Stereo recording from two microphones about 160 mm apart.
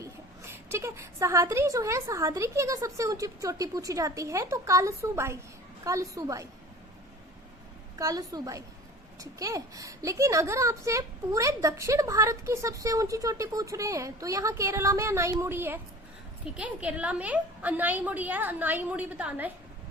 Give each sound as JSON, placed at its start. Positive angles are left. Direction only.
{"t": 0.0, "sound": "a woman's voice", "side_deg": -15}
{"t": 7.9, "sound": "a woman's voice", "side_deg": -20}